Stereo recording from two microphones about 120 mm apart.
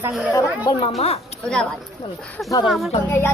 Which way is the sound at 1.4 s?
5° left (ahead or behind).